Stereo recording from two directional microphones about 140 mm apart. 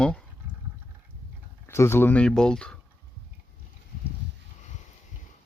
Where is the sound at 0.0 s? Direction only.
5° left (ahead or behind).